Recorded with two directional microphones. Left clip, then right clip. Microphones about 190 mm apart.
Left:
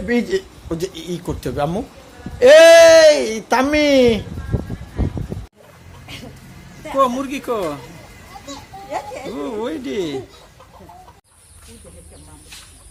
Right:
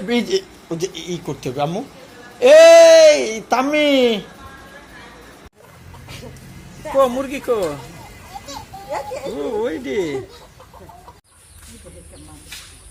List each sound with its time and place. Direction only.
0.1 s speech: 20° left (ahead or behind)
6.8 s speech: 15° left (ahead or behind)
9.6 s speech: 15° left (ahead or behind)